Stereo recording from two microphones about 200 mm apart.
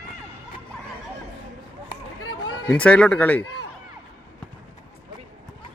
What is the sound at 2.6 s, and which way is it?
Speech, 5° left (ahead or behind).